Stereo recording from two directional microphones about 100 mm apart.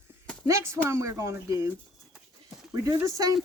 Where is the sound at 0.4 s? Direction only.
30° right (ahead or behind).